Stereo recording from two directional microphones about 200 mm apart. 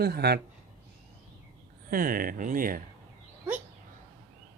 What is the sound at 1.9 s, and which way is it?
Speech, 45° right (ahead or behind).